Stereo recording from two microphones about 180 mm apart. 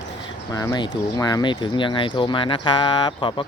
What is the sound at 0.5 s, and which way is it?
Speech, 20° left (ahead or behind).